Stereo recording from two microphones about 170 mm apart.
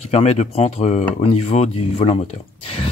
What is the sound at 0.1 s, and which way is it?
Speech, 40° left (ahead or behind).